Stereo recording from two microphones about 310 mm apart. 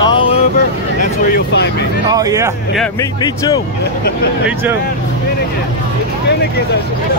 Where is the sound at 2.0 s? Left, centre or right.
Centre.